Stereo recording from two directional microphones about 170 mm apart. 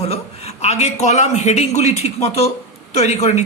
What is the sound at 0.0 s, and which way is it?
A man's voice, 35° left (ahead or behind).